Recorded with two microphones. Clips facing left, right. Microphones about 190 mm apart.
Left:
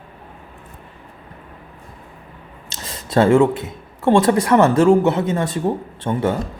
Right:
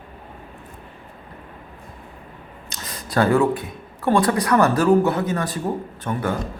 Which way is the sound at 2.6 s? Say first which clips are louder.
Left 2 dB; 25° left (ahead or behind).